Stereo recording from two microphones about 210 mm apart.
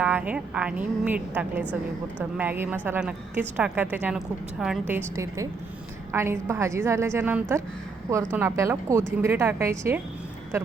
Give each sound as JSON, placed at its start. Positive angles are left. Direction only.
{"t": 0.0, "sound": "a woman's voice", "side_deg": -5}